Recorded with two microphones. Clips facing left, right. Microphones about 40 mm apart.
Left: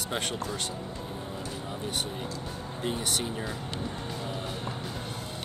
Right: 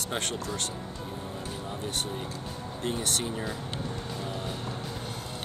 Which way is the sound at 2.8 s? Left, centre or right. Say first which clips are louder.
Even; centre.